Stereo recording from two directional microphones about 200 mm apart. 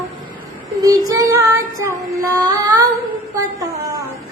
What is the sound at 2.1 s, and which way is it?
Female singing, 15° right (ahead or behind).